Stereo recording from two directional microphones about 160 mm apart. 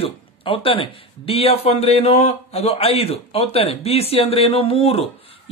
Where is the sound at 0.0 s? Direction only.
35° left (ahead or behind).